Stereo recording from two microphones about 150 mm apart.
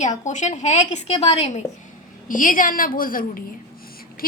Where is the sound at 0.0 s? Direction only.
55° left (ahead or behind).